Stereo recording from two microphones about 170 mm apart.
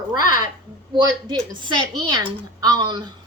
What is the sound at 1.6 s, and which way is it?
Speech, 25° right (ahead or behind).